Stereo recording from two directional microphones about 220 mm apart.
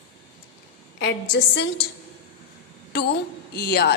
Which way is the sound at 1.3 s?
50° left (ahead or behind).